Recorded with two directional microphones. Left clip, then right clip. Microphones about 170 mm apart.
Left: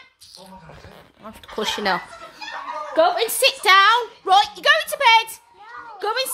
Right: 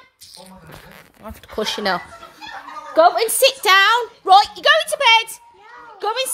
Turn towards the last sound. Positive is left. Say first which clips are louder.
# right 1 dB
turn(degrees=0)  # may be behind; listen again after turning